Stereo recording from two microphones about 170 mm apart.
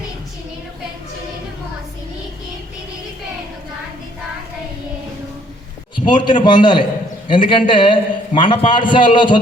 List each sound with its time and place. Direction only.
6.1 s a man's voice: 30° left (ahead or behind)